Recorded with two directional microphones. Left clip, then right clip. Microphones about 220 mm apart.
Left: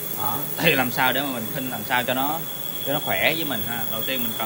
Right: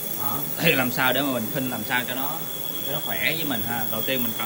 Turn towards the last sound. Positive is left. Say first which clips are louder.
# right 1 dB
turn(degrees=0)  # may be behind; listen again after turning